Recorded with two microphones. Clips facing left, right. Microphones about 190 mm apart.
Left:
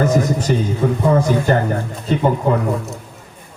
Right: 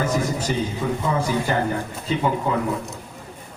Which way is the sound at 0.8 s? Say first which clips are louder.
Left 7 dB; 50° left (ahead or behind).